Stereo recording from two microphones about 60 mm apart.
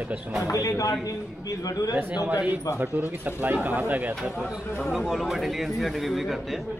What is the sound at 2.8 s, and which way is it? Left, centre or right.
Speech, right.